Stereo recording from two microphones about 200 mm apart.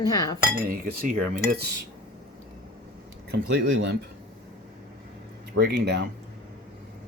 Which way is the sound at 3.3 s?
60° right (ahead or behind).